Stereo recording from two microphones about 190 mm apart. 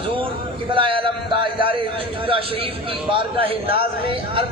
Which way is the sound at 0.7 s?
25° right (ahead or behind).